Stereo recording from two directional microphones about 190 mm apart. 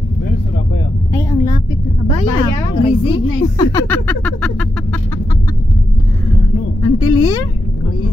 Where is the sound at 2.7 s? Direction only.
25° left (ahead or behind).